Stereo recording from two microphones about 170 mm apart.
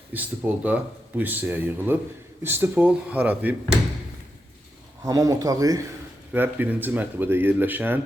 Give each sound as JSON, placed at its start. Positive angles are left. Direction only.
{"t": 0.1, "sound": "speech", "side_deg": -10}
{"t": 5.0, "sound": "speech", "side_deg": -20}